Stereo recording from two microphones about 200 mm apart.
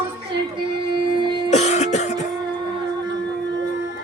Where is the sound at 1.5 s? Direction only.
35° left (ahead or behind).